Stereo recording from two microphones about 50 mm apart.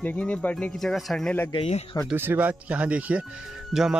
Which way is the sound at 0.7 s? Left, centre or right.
Centre.